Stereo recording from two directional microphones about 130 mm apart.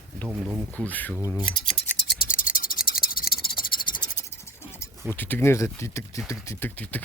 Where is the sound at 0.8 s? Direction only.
10° left (ahead or behind).